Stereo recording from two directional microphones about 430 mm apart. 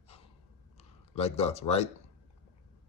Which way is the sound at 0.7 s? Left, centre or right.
Centre.